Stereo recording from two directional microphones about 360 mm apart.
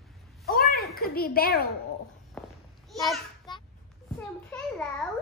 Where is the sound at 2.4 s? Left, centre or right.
Centre.